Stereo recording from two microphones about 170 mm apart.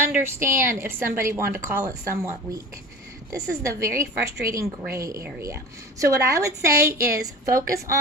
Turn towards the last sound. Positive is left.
turn(degrees=-20)  # may be behind; listen again after turning